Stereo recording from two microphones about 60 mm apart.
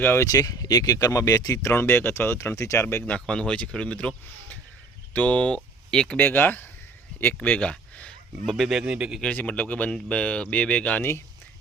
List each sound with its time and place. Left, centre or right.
0.2 s speech: left
1.7 s speech: left
3.1 s speech: centre
6.1 s speech: left
7.4 s speech: left
8.4 s speech: centre
8.8 s speech: centre
9.2 s speech: left